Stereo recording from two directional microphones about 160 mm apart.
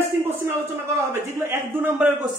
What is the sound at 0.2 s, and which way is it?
A man's voice, 15° right (ahead or behind).